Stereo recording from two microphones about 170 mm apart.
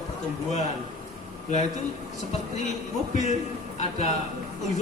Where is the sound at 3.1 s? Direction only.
45° left (ahead or behind).